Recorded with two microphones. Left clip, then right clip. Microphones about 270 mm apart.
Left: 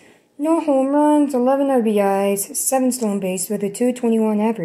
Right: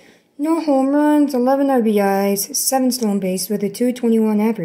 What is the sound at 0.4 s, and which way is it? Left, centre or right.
Speech, centre.